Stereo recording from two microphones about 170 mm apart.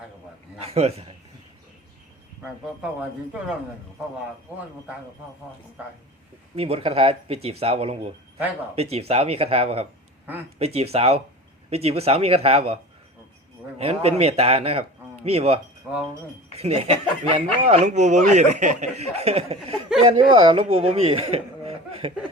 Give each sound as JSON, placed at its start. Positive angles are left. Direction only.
{"t": 0.6, "sound": "speech", "side_deg": -35}
{"t": 6.6, "sound": "speech", "side_deg": -35}
{"t": 15.9, "sound": "speech", "side_deg": -10}
{"t": 16.6, "sound": "speech", "side_deg": -35}